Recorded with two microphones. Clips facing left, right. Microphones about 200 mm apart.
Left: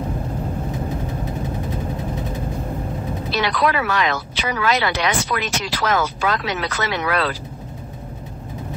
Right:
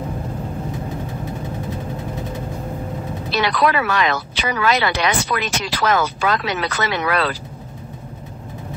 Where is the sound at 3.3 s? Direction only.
65° right (ahead or behind).